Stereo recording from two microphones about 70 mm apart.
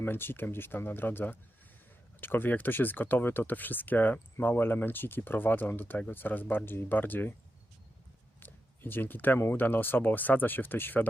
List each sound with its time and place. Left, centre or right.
0.0 s speech: left
8.4 s speech: left